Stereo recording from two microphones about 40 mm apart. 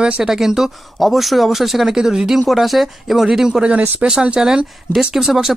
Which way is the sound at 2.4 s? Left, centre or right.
Centre.